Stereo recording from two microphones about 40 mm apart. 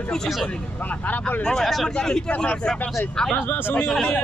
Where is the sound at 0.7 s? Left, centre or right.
Left.